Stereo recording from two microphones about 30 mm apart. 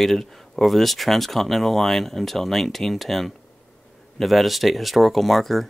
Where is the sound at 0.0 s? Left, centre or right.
Centre.